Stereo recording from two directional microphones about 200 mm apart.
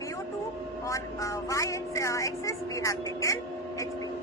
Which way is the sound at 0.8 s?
15° left (ahead or behind).